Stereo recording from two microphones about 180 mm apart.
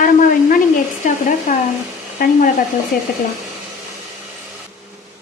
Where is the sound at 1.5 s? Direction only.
45° left (ahead or behind).